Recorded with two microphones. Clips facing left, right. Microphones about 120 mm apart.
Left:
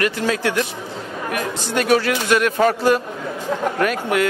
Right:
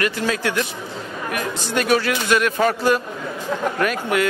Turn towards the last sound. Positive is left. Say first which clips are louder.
# left 1 dB
turn(degrees=45)  # may be behind; listen again after turning